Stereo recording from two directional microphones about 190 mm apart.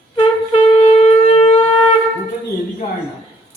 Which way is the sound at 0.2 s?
30° left (ahead or behind).